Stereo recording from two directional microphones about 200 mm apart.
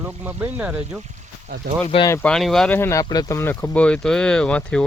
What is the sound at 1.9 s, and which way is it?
Speech, 25° left (ahead or behind).